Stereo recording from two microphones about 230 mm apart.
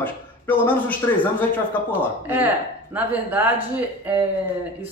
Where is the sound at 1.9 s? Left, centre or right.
Centre.